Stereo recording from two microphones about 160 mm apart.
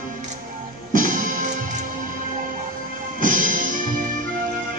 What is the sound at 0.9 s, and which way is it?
Music, 60° right (ahead or behind).